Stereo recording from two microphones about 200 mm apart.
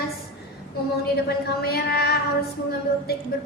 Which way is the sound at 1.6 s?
50° left (ahead or behind).